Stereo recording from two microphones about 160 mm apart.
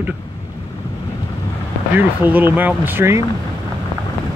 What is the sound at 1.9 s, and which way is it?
Speech, 10° right (ahead or behind).